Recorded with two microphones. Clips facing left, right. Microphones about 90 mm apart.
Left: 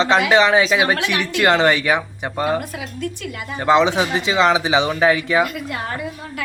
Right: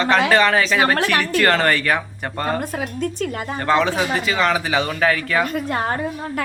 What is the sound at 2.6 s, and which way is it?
A woman's voice, 45° right (ahead or behind).